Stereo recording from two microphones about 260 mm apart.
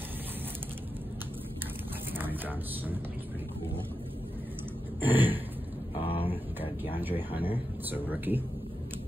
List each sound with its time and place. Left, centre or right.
2.1 s speech: centre
5.0 s speech: centre
5.9 s a sound: left
6.8 s speech: centre